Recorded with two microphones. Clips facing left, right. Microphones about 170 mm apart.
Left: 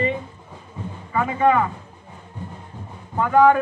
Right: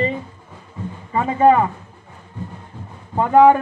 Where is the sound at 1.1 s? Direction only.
30° right (ahead or behind).